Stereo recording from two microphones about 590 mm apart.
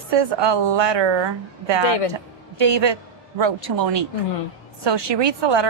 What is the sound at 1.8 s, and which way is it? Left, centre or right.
Speech, left.